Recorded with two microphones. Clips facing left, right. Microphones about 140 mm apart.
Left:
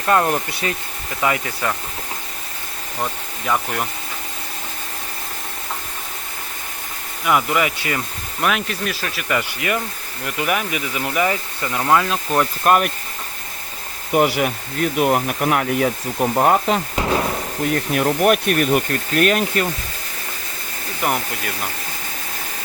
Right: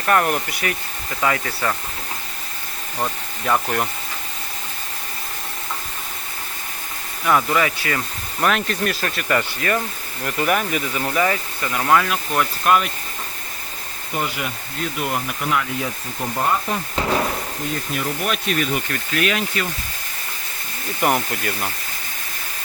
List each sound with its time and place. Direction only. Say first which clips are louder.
0.0 s speech: left 1 dB; 20° left (ahead or behind)
3.0 s speech: right 1 dB; 5° right (ahead or behind)
7.3 s speech: even; 15° left (ahead or behind)
8.4 s speech: right 1 dB; 5° left (ahead or behind); by 12.5 s 30° left (ahead or behind)
12.6 s speech: left 2 dB; 50° left (ahead or behind)
14.1 s speech: left 9 dB; 65° left (ahead or behind)
17.7 s speech: left 8 dB; 60° left (ahead or behind)
21.0 s speech: right 2 dB; centre (ahead or behind)